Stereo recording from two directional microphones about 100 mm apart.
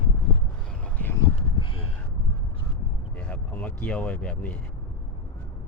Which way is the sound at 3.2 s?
15° left (ahead or behind).